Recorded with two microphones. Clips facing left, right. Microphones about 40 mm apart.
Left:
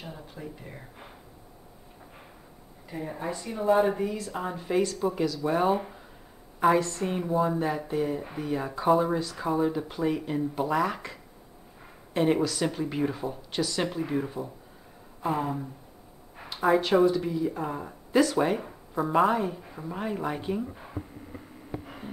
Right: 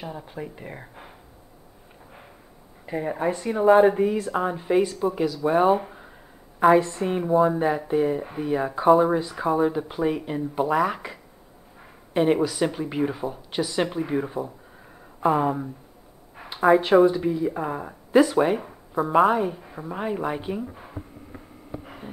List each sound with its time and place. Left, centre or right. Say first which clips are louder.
0.2 s speech: right 5 dB; right
2.9 s speech: right 8 dB; right
3.8 s speech: right 7 dB; centre
16.3 s a sound: right 5 dB; centre
17.0 s speech: right 4 dB; centre
21.8 s a sound: right 1 dB; centre